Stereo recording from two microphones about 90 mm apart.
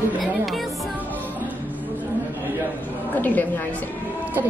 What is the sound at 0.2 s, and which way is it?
Music, centre (ahead or behind).